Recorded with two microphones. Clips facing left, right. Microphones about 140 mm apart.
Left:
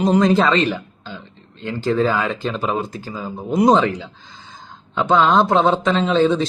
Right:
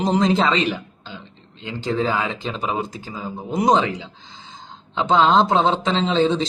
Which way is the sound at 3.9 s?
20° right (ahead or behind).